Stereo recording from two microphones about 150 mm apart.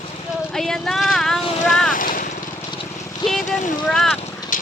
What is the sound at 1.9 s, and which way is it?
Vehicle, 65° left (ahead or behind).